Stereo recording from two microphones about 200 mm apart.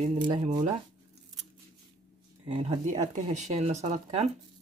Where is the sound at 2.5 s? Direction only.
30° right (ahead or behind).